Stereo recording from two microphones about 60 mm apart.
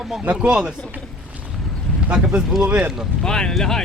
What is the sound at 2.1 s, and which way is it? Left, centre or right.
Speech, centre.